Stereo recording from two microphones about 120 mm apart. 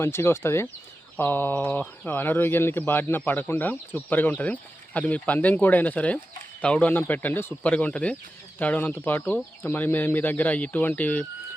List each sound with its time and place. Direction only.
0.0 s speech: 20° left (ahead or behind)